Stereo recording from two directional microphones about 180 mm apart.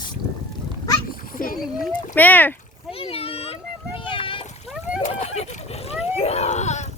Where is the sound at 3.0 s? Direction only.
30° left (ahead or behind).